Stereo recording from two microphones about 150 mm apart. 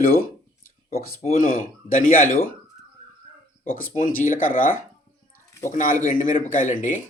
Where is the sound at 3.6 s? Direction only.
70° left (ahead or behind).